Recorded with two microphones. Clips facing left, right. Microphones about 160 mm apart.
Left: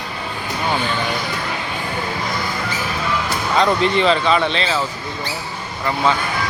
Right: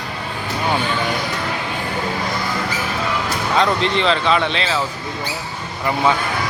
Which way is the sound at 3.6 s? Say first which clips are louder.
Left 3 dB; 5° left (ahead or behind).